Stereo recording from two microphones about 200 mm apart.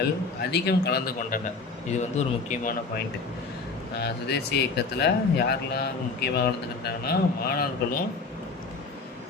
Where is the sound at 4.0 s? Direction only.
55° left (ahead or behind).